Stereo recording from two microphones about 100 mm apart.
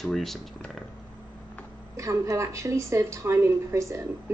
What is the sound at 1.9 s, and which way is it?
Speech, 30° right (ahead or behind).